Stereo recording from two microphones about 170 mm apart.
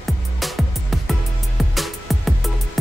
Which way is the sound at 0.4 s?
Centre (ahead or behind).